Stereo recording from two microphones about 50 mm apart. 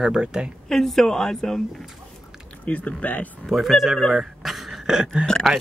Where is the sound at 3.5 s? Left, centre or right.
Centre.